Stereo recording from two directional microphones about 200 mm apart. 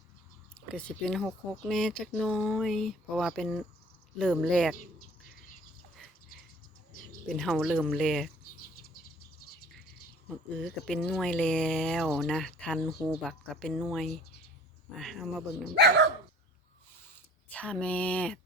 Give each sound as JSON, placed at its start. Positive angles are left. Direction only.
{"t": 0.7, "sound": "speech", "side_deg": 5}
{"t": 7.3, "sound": "speech", "side_deg": 0}
{"t": 10.2, "sound": "speech", "side_deg": 5}
{"t": 15.7, "sound": "speech", "side_deg": -55}
{"t": 17.5, "sound": "speech", "side_deg": 5}